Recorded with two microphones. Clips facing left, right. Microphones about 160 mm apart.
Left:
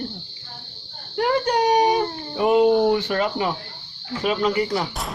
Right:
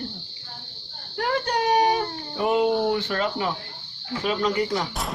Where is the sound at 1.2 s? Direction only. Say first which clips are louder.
Left 5 dB; 15° left (ahead or behind).